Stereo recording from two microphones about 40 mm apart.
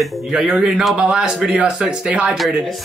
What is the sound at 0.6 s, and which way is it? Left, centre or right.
Speech, centre.